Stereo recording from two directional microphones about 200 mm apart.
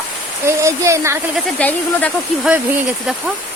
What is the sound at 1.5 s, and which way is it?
Speech, 5° left (ahead or behind).